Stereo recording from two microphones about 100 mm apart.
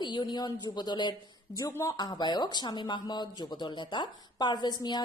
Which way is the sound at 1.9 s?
45° left (ahead or behind).